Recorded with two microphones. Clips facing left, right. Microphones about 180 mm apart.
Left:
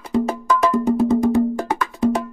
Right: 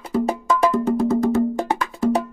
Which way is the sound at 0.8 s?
15° left (ahead or behind).